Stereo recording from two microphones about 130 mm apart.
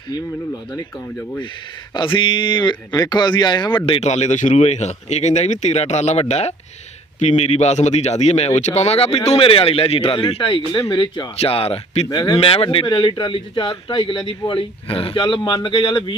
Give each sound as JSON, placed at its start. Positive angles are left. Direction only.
{"t": 1.9, "sound": "a man's voice", "side_deg": 40}
{"t": 4.0, "sound": "speech", "side_deg": 60}
{"t": 11.3, "sound": "speech", "side_deg": 50}
{"t": 12.0, "sound": "speech", "side_deg": 25}
{"t": 12.4, "sound": "a man's voice", "side_deg": 45}